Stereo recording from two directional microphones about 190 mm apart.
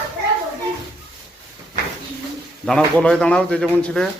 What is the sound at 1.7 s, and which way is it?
Bird, 45° right (ahead or behind).